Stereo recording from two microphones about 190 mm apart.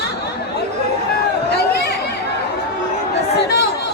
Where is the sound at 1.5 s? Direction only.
60° left (ahead or behind).